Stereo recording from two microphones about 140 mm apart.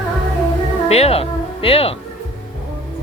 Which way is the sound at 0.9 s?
45° left (ahead or behind).